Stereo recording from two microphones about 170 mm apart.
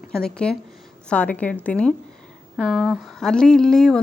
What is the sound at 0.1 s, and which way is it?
A woman's voice, 5° left (ahead or behind).